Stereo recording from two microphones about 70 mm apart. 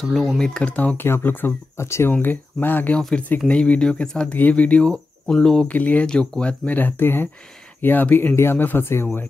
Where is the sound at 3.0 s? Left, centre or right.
Centre.